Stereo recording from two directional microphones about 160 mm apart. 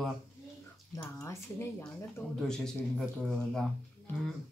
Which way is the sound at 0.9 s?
20° left (ahead or behind).